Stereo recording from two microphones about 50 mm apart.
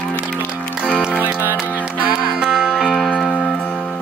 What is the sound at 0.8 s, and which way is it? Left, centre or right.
Music, centre.